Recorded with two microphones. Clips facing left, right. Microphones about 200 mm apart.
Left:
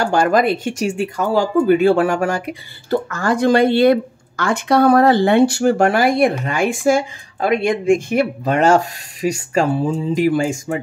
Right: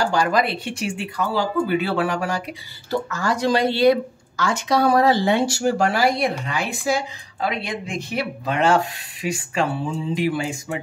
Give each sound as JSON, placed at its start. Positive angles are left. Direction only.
{"t": 0.0, "sound": "speech", "side_deg": 50}